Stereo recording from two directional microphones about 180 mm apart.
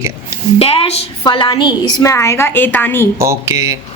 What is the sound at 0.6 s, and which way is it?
A woman's voice, 30° left (ahead or behind).